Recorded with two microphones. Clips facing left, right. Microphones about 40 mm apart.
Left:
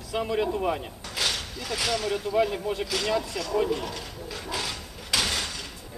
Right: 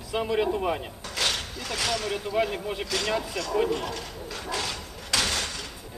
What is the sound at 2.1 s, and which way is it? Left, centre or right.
Speech, centre.